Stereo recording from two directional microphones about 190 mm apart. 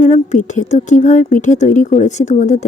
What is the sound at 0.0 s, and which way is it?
A woman's voice, 40° left (ahead or behind).